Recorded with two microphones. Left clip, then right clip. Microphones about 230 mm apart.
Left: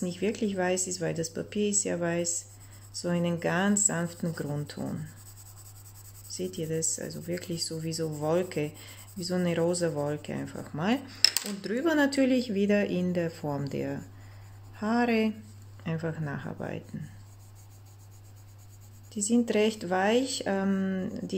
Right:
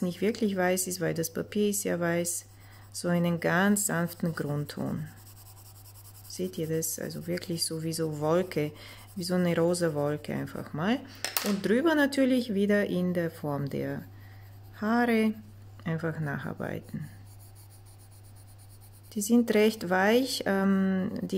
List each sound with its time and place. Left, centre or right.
0.0 s speech: centre
6.3 s speech: right
11.1 s speech: centre
19.0 s speech: right